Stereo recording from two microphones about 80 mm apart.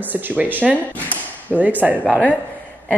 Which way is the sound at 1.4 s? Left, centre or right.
Right.